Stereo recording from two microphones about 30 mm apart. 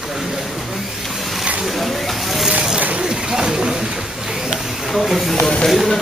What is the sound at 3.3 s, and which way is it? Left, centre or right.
Speech, right.